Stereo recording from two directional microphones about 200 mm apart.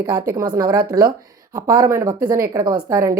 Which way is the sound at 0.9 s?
20° right (ahead or behind).